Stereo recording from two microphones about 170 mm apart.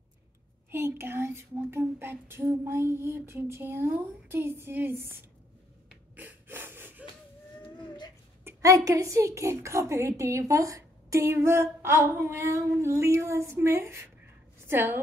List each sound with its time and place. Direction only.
0.7 s a woman's voice: 15° right (ahead or behind)
6.1 s a sound: 10° right (ahead or behind)
8.5 s a woman's voice: 20° right (ahead or behind)